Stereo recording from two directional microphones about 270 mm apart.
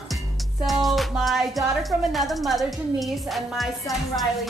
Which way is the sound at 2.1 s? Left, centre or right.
Centre.